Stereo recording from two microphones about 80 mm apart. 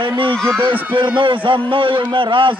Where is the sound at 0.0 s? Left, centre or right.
Right.